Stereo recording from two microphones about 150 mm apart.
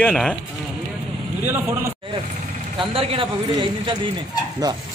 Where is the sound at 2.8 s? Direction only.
40° right (ahead or behind).